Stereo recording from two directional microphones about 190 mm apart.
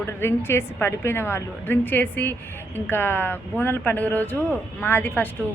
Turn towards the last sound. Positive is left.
turn(degrees=10)  # may be behind; listen again after turning